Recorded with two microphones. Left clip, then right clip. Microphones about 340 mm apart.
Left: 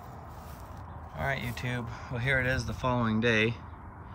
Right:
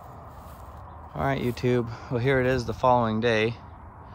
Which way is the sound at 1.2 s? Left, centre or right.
Centre.